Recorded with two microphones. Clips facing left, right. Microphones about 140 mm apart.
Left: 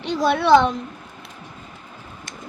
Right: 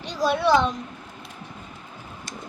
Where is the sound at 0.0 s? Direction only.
65° left (ahead or behind).